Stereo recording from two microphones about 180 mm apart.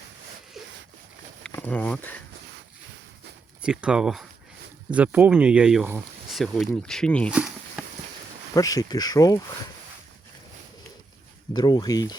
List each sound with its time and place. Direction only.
1.5 s speech: 5° left (ahead or behind)
3.6 s speech: 5° right (ahead or behind)
7.3 s a sound: 5° right (ahead or behind)
8.5 s speech: 20° left (ahead or behind)
11.5 s speech: 25° left (ahead or behind)